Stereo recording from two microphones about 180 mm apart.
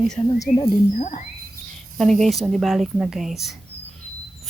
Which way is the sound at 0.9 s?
40° left (ahead or behind).